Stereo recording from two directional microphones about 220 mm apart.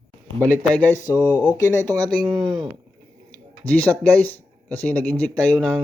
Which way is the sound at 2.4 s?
Centre (ahead or behind).